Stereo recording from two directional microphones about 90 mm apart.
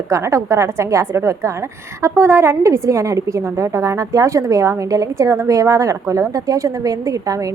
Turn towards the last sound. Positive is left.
turn(degrees=-40)  # may be behind; listen again after turning